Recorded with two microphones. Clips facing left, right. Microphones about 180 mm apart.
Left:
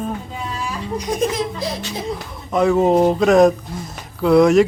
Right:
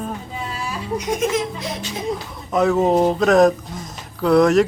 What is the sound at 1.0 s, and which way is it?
Laughter, 35° left (ahead or behind).